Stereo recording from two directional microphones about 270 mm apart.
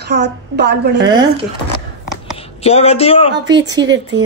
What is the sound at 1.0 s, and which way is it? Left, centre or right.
Speech, centre.